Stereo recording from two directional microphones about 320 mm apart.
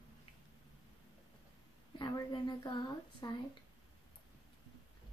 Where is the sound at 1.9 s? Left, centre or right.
Centre.